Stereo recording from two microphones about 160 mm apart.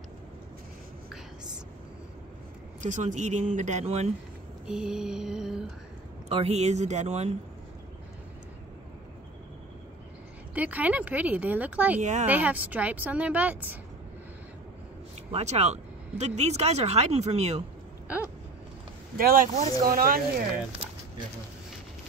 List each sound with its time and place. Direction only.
2.8 s speech: 50° right (ahead or behind)
4.6 s a sound: 5° right (ahead or behind)
6.2 s speech: 40° right (ahead or behind)
10.5 s speech: 10° right (ahead or behind)
12.0 s speech: 50° right (ahead or behind)
12.3 s speech: 10° right (ahead or behind)
15.3 s speech: 40° right (ahead or behind)
18.0 s a sound: 10° right (ahead or behind)
19.1 s speech: 65° right (ahead or behind)